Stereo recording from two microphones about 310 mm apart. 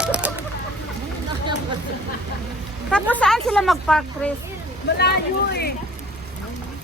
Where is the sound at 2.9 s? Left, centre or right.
Centre.